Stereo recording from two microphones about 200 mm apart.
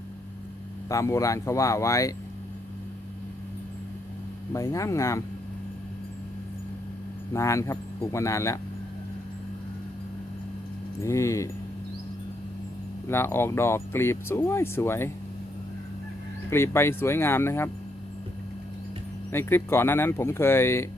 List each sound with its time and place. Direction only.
0.9 s speech: 15° left (ahead or behind)
4.5 s speech: 15° left (ahead or behind)
7.3 s speech: 15° left (ahead or behind)
11.0 s speech: 15° left (ahead or behind)
13.1 s speech: 10° left (ahead or behind)
16.5 s speech: 10° left (ahead or behind)
19.3 s speech: 10° left (ahead or behind)